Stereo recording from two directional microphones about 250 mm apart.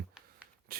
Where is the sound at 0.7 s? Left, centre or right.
Right.